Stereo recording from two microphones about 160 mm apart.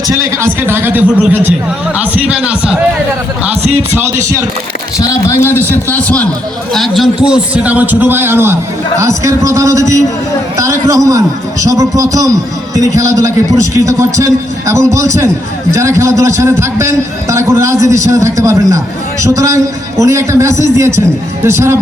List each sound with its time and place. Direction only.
0.1 s speech: 15° right (ahead or behind)
4.9 s a man's voice: 20° left (ahead or behind); by 21.8 s 15° right (ahead or behind)